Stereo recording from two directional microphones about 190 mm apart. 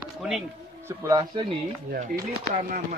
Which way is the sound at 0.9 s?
15° right (ahead or behind).